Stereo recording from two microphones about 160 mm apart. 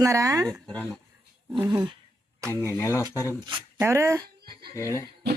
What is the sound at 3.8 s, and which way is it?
Speech, 20° right (ahead or behind).